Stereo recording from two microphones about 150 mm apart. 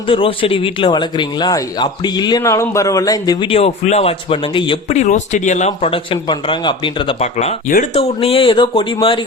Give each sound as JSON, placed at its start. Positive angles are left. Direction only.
{"t": 0.1, "sound": "speech", "side_deg": 35}
{"t": 3.5, "sound": "a man's voice", "side_deg": 45}
{"t": 4.9, "sound": "a man's voice", "side_deg": 50}